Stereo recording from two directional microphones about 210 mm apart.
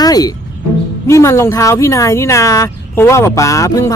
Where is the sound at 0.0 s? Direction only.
20° left (ahead or behind).